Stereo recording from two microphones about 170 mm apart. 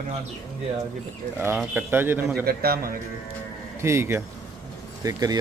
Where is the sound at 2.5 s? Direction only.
65° right (ahead or behind).